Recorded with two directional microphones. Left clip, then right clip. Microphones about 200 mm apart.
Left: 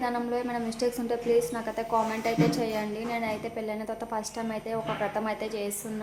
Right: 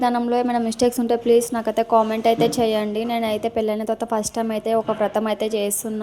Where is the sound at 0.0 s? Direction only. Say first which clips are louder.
Right 10 dB; 40° right (ahead or behind).